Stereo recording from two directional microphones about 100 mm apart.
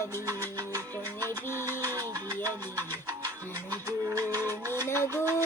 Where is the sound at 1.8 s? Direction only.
40° right (ahead or behind).